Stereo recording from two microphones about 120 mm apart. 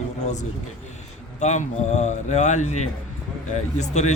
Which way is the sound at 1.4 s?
75° left (ahead or behind).